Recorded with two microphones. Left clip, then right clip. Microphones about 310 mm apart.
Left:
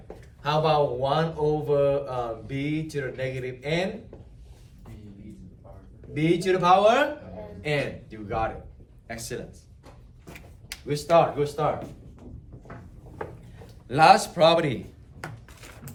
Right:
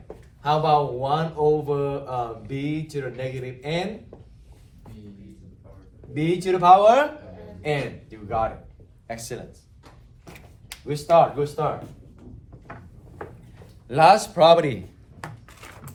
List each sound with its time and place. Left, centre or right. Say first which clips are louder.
0.4 s speech: right 2 dB; centre
6.1 s speech: even; centre
13.8 s speech: right 2 dB; centre
15.2 s a sound: right 1 dB; centre